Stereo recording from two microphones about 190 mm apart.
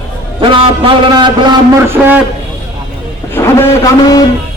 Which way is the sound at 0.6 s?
25° right (ahead or behind).